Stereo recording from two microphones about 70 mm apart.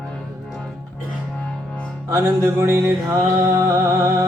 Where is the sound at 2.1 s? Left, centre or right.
Right.